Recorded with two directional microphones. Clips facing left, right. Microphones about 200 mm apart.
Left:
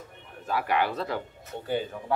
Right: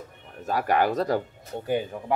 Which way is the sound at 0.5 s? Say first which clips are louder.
Right 4 dB; 45° right (ahead or behind).